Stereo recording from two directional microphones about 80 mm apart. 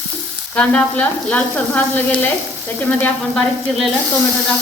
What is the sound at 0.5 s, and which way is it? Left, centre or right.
Sizzle, centre.